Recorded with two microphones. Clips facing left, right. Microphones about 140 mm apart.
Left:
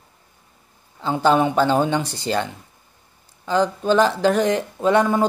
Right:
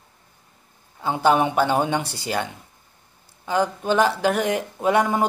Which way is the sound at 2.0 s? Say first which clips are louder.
Left 3 dB; 15° left (ahead or behind).